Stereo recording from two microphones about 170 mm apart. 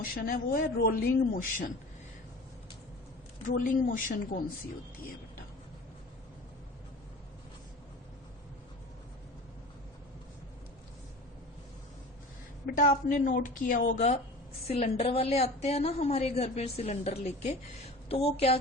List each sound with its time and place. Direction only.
0.0 s a man's voice: 60° left (ahead or behind)
3.5 s a woman's voice: 55° left (ahead or behind)
12.6 s a woman's voice: 55° left (ahead or behind); by 18.5 s 35° left (ahead or behind)